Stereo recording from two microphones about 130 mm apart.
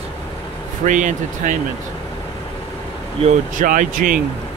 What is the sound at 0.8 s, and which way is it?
Speech, 75° right (ahead or behind).